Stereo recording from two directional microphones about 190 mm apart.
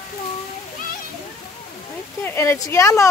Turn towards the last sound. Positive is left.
turn(degrees=15)  # may be behind; listen again after turning